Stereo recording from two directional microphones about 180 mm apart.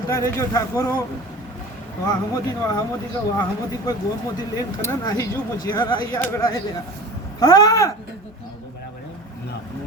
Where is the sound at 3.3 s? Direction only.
20° left (ahead or behind).